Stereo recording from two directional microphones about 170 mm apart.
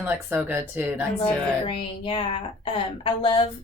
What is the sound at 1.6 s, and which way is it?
Speech, 30° left (ahead or behind).